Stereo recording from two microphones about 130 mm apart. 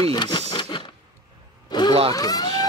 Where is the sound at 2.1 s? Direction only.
30° left (ahead or behind).